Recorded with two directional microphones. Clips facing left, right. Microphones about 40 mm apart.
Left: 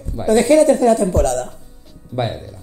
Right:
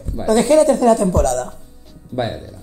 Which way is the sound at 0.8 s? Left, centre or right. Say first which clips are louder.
Even; right.